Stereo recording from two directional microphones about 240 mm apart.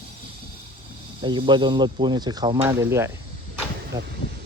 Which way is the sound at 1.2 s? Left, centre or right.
Centre.